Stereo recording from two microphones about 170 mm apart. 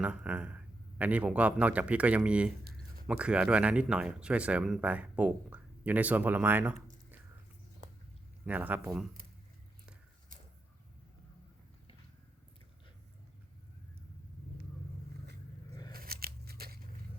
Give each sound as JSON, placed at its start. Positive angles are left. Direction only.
{"t": 0.0, "sound": "speech", "side_deg": -5}
{"t": 8.4, "sound": "speech", "side_deg": -10}
{"t": 15.9, "sound": "scissors", "side_deg": -60}